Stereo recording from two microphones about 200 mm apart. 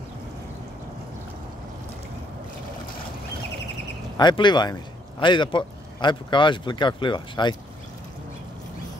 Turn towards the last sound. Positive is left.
turn(degrees=25)  # may be behind; listen again after turning